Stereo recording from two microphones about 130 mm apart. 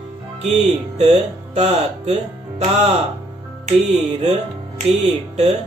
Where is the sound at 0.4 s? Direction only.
60° right (ahead or behind).